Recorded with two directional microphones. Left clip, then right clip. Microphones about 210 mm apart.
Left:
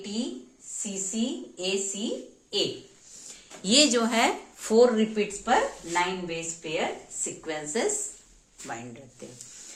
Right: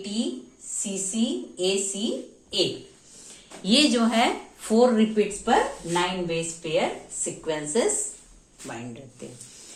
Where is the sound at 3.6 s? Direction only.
55° left (ahead or behind).